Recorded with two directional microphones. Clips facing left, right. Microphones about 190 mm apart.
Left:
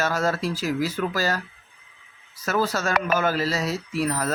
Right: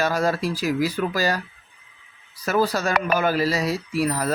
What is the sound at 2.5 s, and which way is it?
Speech, 15° right (ahead or behind).